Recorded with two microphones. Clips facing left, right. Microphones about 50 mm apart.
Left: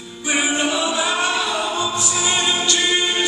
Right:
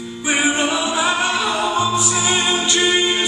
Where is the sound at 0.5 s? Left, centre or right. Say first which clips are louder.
Right 1 dB; right.